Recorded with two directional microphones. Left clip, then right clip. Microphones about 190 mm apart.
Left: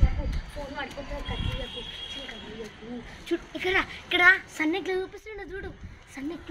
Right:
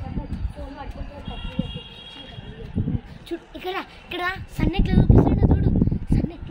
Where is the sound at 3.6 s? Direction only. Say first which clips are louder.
Left 5 dB; 30° right (ahead or behind).